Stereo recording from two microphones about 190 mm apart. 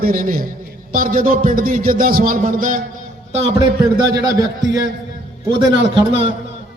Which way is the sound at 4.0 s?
20° right (ahead or behind).